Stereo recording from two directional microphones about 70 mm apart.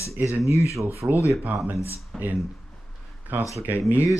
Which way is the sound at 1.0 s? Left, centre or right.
Right.